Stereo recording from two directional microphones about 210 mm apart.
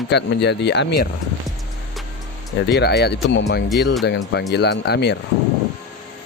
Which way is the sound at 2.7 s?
50° left (ahead or behind).